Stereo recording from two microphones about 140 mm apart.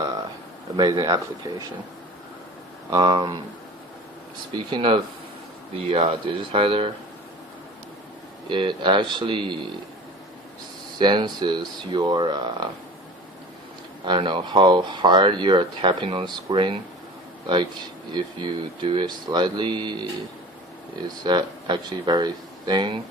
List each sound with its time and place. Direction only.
0.8 s speech: 30° right (ahead or behind)
2.9 s speech: 30° right (ahead or behind)
4.5 s speech: 40° right (ahead or behind)
8.4 s speech: 35° right (ahead or behind)
11.0 s speech: 35° right (ahead or behind)
14.0 s a man's voice: 35° right (ahead or behind)
21.2 s speech: 30° right (ahead or behind)